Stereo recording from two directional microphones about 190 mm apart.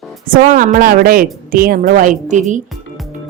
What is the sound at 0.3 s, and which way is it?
A woman's voice, 45° right (ahead or behind).